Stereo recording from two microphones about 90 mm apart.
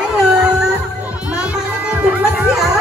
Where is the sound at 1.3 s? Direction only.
15° right (ahead or behind).